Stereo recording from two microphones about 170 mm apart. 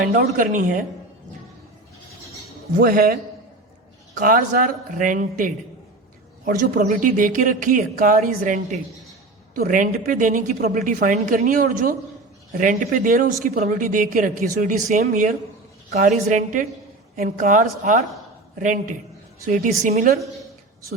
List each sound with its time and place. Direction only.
0.1 s speech: 50° right (ahead or behind)
2.7 s a man's voice: 60° right (ahead or behind)
19.9 s a man's voice: 60° right (ahead or behind)